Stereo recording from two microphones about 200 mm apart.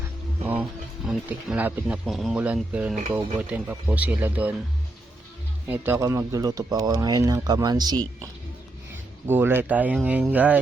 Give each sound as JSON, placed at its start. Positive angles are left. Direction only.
{"t": 1.0, "sound": "speech", "side_deg": -5}
{"t": 3.1, "sound": "speech", "side_deg": -25}
{"t": 3.3, "sound": "speech", "side_deg": -10}
{"t": 5.6, "sound": "speech", "side_deg": -10}